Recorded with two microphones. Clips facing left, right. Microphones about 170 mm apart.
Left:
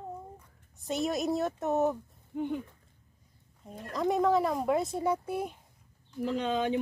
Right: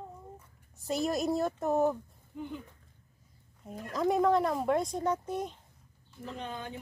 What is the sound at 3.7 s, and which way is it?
Speech, centre (ahead or behind).